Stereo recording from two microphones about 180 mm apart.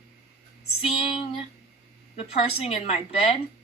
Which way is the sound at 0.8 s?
30° left (ahead or behind).